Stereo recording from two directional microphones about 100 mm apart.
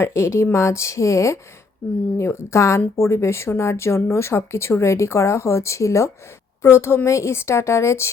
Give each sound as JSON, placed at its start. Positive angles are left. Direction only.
{"t": 0.0, "sound": "speech", "side_deg": 25}